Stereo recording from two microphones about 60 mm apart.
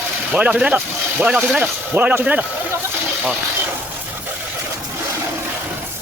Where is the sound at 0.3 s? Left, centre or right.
Right.